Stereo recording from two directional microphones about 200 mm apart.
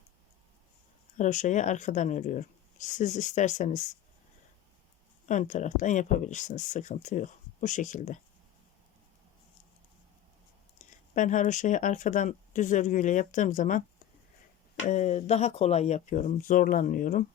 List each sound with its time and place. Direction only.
1.1 s speech: 40° left (ahead or behind)
5.3 s speech: 35° left (ahead or behind)
11.1 s speech: 40° left (ahead or behind)
14.8 s speech: 35° left (ahead or behind)